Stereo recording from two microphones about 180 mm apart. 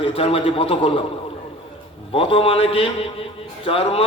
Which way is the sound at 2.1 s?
30° left (ahead or behind).